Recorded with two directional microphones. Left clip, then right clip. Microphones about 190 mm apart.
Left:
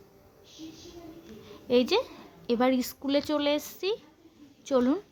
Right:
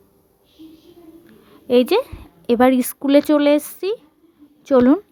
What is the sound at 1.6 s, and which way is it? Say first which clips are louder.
A woman's voice: right 9 dB; 35° right (ahead or behind).